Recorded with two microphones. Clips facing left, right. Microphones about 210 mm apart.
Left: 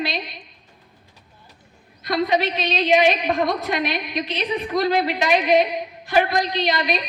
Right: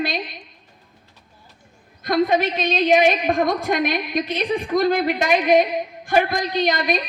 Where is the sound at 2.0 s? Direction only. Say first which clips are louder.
Right 2 dB; 50° right (ahead or behind).